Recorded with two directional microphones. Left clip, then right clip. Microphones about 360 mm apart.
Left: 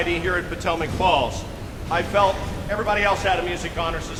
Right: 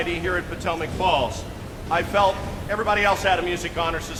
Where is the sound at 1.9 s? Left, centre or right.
Centre.